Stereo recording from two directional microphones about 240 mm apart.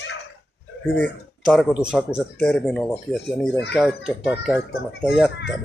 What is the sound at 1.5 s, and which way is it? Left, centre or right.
Speech, centre.